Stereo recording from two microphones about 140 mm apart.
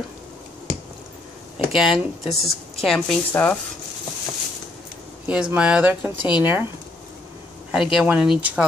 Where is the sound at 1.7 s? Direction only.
Centre (ahead or behind).